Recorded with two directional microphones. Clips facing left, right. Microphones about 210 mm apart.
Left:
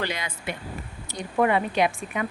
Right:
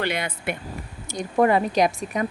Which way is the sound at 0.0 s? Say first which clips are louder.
Right 4 dB; 60° right (ahead or behind).